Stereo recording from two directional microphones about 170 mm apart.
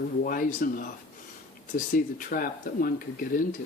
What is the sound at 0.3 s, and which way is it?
Speech, 55° left (ahead or behind).